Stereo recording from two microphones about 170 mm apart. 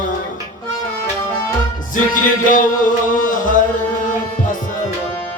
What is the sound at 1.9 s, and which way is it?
Music, 50° left (ahead or behind).